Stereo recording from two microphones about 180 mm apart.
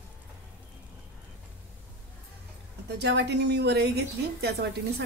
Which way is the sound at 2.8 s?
70° right (ahead or behind).